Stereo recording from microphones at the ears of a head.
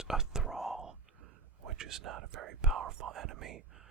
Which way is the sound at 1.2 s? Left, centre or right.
Right.